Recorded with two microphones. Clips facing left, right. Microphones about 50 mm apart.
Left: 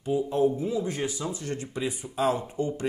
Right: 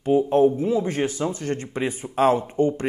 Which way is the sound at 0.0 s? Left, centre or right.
Right.